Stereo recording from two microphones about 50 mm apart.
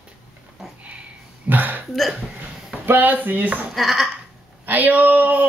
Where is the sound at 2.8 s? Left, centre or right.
Right.